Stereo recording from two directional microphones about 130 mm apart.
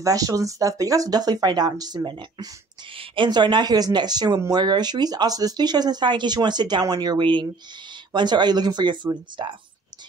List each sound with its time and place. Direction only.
0.0 s speech: 25° right (ahead or behind)